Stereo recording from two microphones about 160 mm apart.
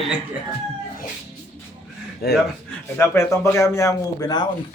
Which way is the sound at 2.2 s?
80° left.